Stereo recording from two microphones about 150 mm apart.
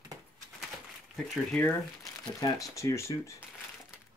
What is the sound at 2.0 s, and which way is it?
Speech, 20° left (ahead or behind).